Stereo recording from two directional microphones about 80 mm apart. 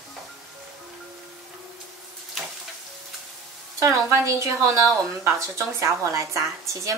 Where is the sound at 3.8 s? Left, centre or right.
Right.